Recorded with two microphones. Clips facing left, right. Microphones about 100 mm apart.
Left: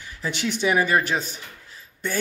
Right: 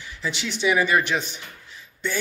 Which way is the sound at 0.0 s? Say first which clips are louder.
Left 2 dB; 45° left (ahead or behind).